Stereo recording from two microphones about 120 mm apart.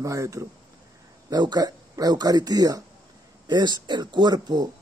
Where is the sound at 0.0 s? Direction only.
25° right (ahead or behind).